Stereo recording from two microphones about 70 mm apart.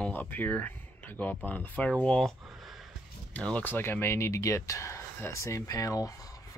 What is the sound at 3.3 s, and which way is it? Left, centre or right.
Speech, centre.